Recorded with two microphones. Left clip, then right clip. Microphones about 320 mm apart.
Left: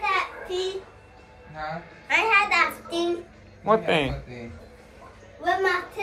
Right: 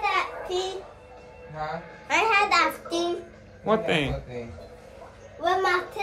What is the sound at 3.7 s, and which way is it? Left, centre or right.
Speech, centre.